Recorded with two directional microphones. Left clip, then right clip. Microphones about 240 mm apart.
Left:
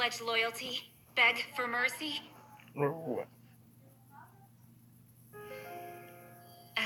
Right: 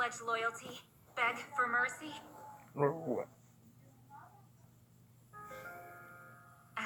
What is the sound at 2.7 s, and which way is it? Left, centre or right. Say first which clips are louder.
Speech: even; centre.